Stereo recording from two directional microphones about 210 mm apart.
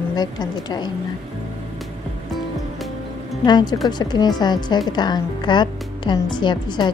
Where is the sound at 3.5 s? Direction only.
20° left (ahead or behind).